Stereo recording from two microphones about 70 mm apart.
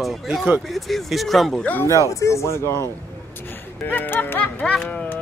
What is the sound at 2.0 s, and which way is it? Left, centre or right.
Speech, left.